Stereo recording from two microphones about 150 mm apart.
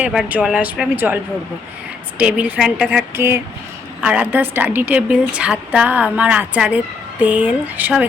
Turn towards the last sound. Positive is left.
turn(degrees=-10)  # may be behind; listen again after turning